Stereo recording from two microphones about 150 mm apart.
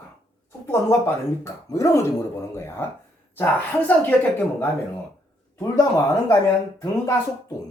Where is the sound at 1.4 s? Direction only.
20° left (ahead or behind).